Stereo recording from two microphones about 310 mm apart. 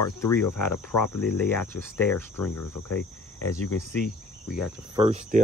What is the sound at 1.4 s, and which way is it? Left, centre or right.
Cricket, centre.